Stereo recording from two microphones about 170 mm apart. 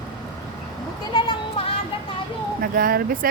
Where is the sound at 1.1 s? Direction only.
30° left (ahead or behind).